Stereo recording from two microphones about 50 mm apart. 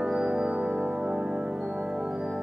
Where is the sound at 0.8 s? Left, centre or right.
Right.